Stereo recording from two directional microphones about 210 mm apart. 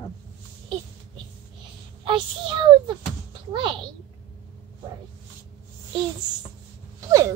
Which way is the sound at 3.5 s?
25° right (ahead or behind).